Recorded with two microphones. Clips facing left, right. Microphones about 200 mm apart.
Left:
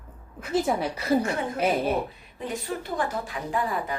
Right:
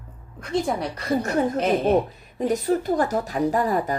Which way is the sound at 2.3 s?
40° right (ahead or behind).